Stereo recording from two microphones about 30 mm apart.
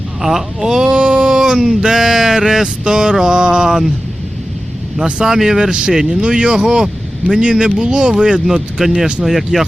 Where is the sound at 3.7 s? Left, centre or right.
Centre.